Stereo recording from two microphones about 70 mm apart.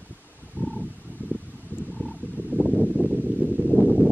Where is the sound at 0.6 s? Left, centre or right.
Centre.